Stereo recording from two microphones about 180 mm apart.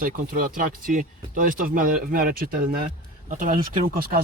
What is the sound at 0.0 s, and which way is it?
Speech, 50° right (ahead or behind).